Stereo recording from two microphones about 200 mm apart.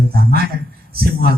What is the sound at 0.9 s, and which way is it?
Speech, 50° right (ahead or behind).